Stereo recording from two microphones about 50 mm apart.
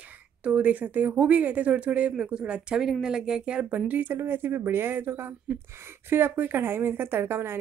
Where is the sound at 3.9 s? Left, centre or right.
Right.